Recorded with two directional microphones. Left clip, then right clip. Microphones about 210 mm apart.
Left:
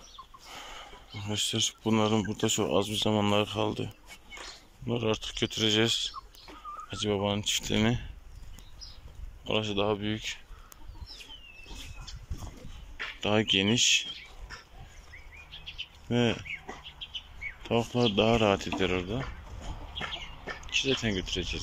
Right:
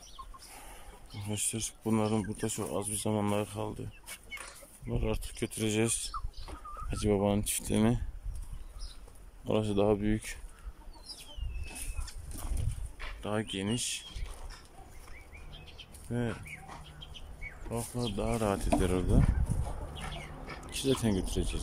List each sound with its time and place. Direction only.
0.6 s speech: 5° right (ahead or behind)
9.4 s speech: 20° right (ahead or behind)
13.2 s speech: centre (ahead or behind)
16.1 s speech: 5° left (ahead or behind)
17.6 s speech: 10° left (ahead or behind)
18.8 s speech: 15° right (ahead or behind)
20.6 s speech: 25° right (ahead or behind)